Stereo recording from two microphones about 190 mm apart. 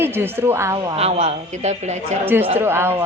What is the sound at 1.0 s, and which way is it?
A man's voice, 35° right (ahead or behind).